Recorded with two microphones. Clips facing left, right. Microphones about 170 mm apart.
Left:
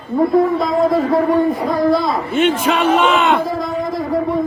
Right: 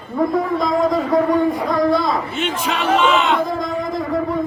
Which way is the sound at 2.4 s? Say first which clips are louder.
Left 7 dB; 55° left (ahead or behind).